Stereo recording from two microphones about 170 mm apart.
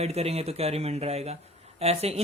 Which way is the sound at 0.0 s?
35° right (ahead or behind).